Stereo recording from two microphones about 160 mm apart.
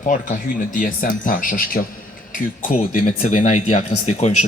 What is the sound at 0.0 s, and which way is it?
Speech, 55° left (ahead or behind).